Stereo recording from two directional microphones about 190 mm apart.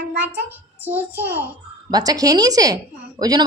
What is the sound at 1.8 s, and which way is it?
A woman's voice, 20° right (ahead or behind).